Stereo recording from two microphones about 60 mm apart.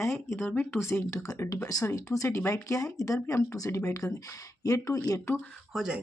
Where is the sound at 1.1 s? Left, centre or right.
Left.